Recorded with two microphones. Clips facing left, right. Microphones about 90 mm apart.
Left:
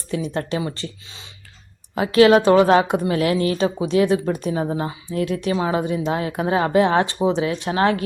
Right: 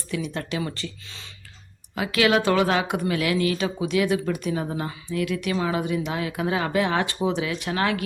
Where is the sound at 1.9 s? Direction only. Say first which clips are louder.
Left 8 dB; 35° left (ahead or behind).